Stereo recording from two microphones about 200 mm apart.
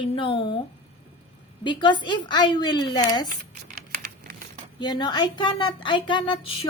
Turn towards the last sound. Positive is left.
turn(degrees=25)  # may be behind; listen again after turning